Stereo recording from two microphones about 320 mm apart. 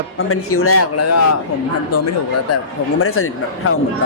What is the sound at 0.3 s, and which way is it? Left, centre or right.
Speech, left.